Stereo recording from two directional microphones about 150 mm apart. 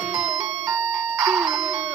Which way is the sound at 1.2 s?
5° right (ahead or behind).